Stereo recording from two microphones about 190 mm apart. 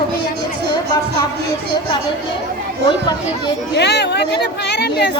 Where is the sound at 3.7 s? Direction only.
60° left (ahead or behind).